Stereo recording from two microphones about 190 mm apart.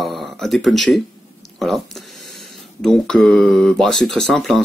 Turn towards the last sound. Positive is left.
turn(degrees=0)  # may be behind; listen again after turning